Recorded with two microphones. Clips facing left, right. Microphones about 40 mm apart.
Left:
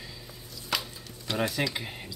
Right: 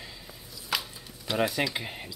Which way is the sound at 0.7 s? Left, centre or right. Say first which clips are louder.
Even; centre.